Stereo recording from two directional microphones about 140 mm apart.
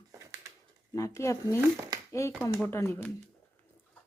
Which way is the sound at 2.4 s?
15° left (ahead or behind).